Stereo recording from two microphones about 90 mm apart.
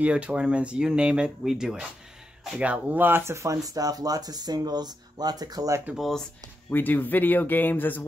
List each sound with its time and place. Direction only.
0.0 s speech: 15° right (ahead or behind); by 5.8 s 45° right (ahead or behind)
5.9 s speech: centre (ahead or behind)
6.7 s speech: 20° left (ahead or behind)